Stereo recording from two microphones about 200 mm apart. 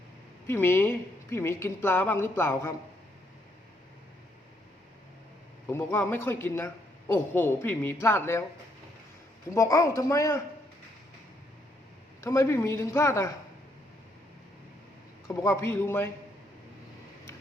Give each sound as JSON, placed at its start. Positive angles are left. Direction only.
{"t": 0.4, "sound": "a woman's voice", "side_deg": 10}
{"t": 5.6, "sound": "a woman's voice", "side_deg": 10}
{"t": 9.6, "sound": "a woman's voice", "side_deg": 15}
{"t": 12.2, "sound": "a woman's voice", "side_deg": 15}
{"t": 15.3, "sound": "a woman's voice", "side_deg": 15}